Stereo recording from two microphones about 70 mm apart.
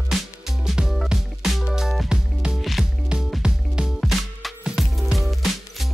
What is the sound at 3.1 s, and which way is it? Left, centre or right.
Music, centre.